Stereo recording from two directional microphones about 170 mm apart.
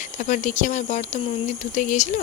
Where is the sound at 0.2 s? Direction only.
45° left (ahead or behind).